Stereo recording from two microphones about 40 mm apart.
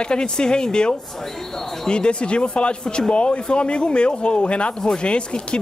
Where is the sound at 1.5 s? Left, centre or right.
Centre.